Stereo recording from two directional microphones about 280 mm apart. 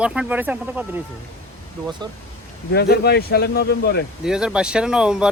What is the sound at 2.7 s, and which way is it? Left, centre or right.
Speech, left.